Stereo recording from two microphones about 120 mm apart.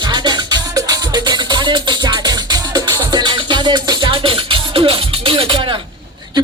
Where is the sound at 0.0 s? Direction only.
40° right (ahead or behind).